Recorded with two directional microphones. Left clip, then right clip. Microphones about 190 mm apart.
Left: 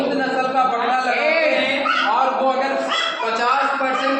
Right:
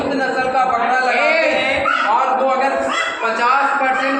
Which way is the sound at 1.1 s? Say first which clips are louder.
Right 3 dB; 50° right (ahead or behind).